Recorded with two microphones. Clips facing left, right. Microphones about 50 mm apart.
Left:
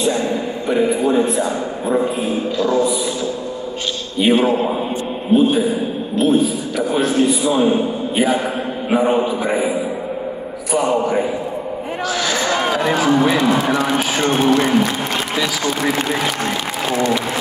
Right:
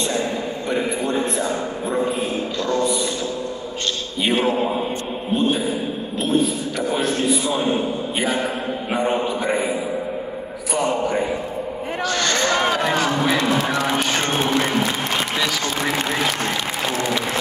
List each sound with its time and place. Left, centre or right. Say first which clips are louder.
0.7 s a man's voice: left 7 dB; centre
2.6 s a man's voice: left 4 dB; centre
4.2 s a man's voice: left 5 dB; centre
8.9 s a man's voice: left 6 dB; centre
12.1 s a sound: left 1 dB; centre
13.4 s speech: left 4 dB; left